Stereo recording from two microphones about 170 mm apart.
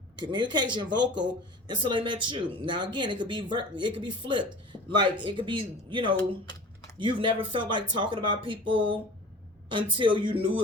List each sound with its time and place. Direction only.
0.2 s speech: 25° right (ahead or behind)
6.4 s typing: 25° left (ahead or behind)
7.0 s speech: 30° right (ahead or behind)